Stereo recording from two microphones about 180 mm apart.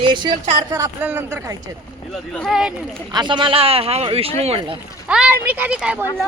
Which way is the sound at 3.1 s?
25° right (ahead or behind).